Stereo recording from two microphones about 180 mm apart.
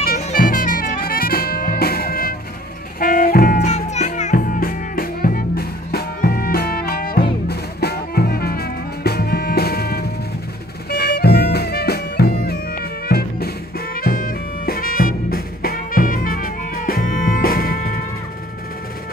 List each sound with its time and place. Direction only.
0.2 s music: 50° left (ahead or behind)